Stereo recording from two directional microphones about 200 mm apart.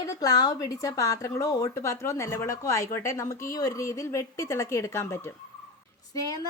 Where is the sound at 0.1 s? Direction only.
20° left (ahead or behind).